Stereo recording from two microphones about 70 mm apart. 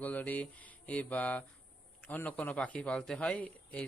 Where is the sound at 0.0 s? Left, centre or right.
Left.